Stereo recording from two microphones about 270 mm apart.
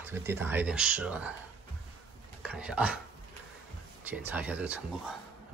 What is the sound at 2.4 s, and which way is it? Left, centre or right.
Speech, centre.